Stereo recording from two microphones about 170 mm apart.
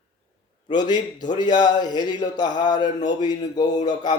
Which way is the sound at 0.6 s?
25° left (ahead or behind).